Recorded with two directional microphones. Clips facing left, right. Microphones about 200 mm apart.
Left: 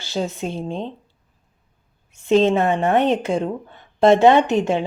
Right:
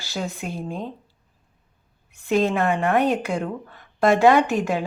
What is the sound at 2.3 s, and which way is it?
A woman's voice, 25° left (ahead or behind).